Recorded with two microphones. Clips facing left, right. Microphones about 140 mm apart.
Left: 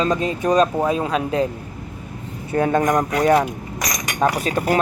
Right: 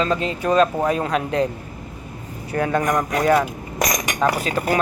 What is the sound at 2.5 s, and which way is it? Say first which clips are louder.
Speech: left 3 dB; 25° left (ahead or behind).